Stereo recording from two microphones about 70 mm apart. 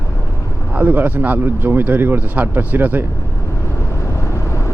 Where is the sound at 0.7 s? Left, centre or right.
Right.